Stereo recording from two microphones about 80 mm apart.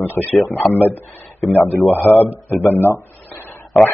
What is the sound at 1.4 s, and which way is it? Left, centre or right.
Speech, left.